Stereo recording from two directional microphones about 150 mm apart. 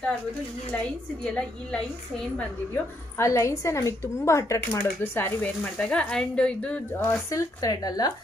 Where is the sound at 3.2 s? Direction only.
20° left (ahead or behind).